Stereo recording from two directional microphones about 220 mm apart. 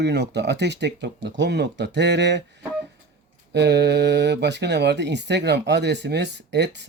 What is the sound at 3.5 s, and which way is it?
Speech, 50° right (ahead or behind).